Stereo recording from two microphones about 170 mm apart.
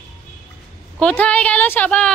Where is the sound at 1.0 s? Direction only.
5° left (ahead or behind).